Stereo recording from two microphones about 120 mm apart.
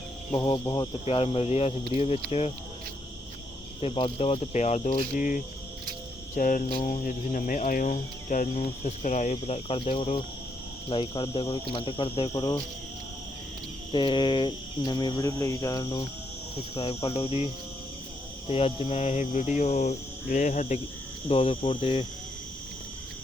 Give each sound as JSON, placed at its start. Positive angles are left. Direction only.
{"t": 0.3, "sound": "speech", "side_deg": 45}
{"t": 1.0, "sound": "cricket", "side_deg": 55}
{"t": 3.8, "sound": "cricket", "side_deg": 50}
{"t": 10.8, "sound": "speech", "side_deg": 45}
{"t": 12.3, "sound": "cricket", "side_deg": 35}
{"t": 13.9, "sound": "cricket", "side_deg": 40}
{"t": 16.7, "sound": "speech", "side_deg": 55}
{"t": 18.4, "sound": "cricket", "side_deg": 55}
{"t": 21.2, "sound": "speech", "side_deg": 50}